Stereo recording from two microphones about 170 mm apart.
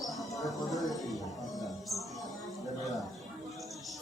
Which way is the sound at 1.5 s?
Centre (ahead or behind).